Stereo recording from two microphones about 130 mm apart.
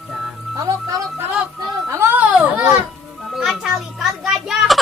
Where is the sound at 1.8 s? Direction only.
15° right (ahead or behind).